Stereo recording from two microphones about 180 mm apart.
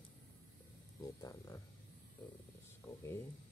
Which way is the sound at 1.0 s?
20° left (ahead or behind).